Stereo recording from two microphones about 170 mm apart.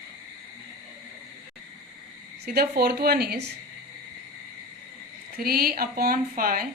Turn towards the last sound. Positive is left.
turn(degrees=-60)  # may be behind; listen again after turning